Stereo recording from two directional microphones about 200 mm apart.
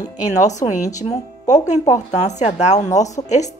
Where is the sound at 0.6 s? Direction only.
35° left (ahead or behind).